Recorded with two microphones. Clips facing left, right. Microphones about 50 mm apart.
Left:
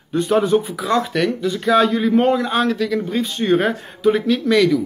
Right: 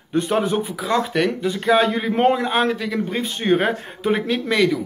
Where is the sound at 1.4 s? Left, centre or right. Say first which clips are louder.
Left 3 dB; right.